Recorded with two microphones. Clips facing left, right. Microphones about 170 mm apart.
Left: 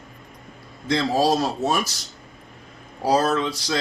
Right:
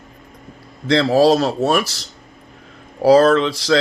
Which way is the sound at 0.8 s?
85° right.